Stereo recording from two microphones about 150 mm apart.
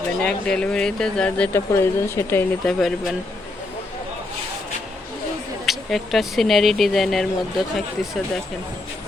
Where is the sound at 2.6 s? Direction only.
Centre (ahead or behind).